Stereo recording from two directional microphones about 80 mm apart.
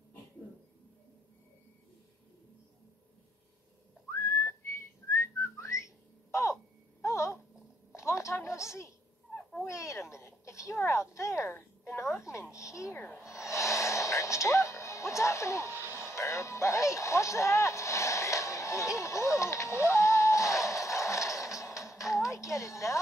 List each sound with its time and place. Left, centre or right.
4.1 s whistling: left
7.0 s a sound: left
9.3 s owl: centre
9.7 s a sound: left
12.1 s babbling: left
12.9 s snort: left
13.2 s music: left
15.7 s music: right
16.1 s music: left
19.8 s a sound: left
22.2 s music: left